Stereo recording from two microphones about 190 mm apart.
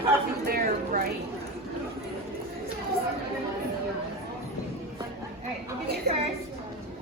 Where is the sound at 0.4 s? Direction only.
50° right (ahead or behind).